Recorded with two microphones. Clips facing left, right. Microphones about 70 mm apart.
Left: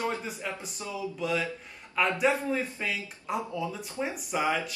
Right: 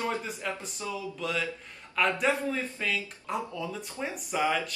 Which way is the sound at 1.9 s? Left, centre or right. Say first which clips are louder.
Left 1 dB; centre.